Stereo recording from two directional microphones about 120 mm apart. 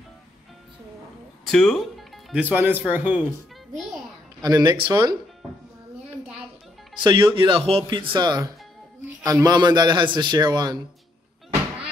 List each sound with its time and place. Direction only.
1.5 s speech: 5° left (ahead or behind)
2.3 s speech: 15° right (ahead or behind)
4.4 s a man's voice: 35° right (ahead or behind)
7.0 s a man's voice: 40° right (ahead or behind)